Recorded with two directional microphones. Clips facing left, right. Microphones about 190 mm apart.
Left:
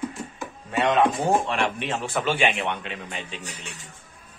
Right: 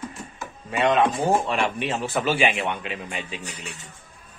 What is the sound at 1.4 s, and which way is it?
A man's voice, centre (ahead or behind).